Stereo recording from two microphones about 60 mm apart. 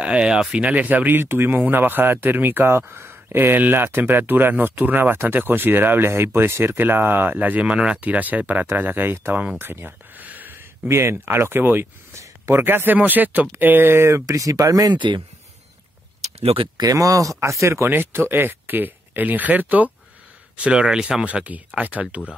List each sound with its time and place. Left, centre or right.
0.0 s speech: centre; by 9.3 s right
9.6 s a sound: right
10.9 s speech: right
12.5 s speech: right
13.9 s speech: right
14.2 s speech: right
16.8 s speech: right
17.8 s speech: right
20.5 s speech: centre